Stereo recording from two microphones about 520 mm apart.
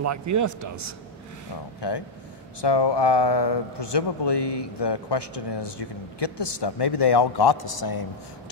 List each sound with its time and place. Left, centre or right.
0.0 s a man's voice: right
1.8 s a man's voice: left